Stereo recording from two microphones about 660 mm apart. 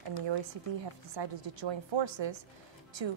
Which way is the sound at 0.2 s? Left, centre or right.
Right.